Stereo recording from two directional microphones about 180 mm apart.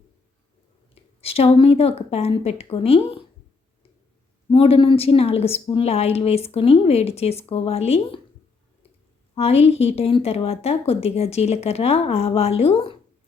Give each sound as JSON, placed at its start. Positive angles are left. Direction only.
{"t": 1.2, "sound": "a woman's voice", "side_deg": 35}
{"t": 4.4, "sound": "a woman's voice", "side_deg": 30}
{"t": 9.3, "sound": "a woman's voice", "side_deg": 35}